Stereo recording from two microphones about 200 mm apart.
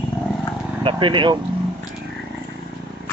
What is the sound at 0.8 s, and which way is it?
Speech, 25° right (ahead or behind).